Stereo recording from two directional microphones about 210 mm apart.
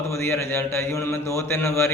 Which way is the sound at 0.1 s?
10° left (ahead or behind).